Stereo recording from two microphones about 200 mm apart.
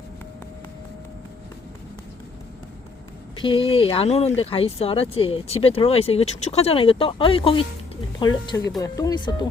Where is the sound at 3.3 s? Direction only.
25° left (ahead or behind).